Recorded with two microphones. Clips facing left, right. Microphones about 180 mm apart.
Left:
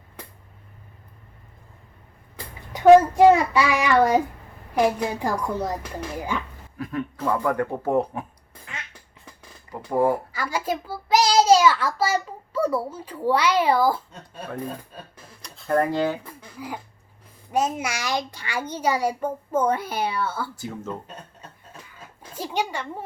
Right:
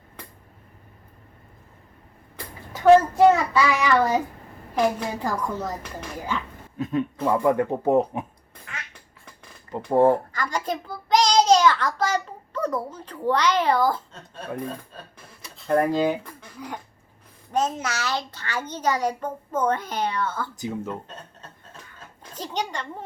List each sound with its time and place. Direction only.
2.3 s a child's voice: 10° left (ahead or behind)
6.7 s speech: 20° right (ahead or behind)
10.0 s a child's voice: 10° left (ahead or behind)
15.4 s a sound: centre (ahead or behind)
15.8 s speech: 15° right (ahead or behind)
16.2 s a sound: 10° left (ahead or behind)
17.5 s a child's voice: 10° left (ahead or behind)
20.6 s speech: 15° right (ahead or behind)
21.8 s a sound: 10° left (ahead or behind)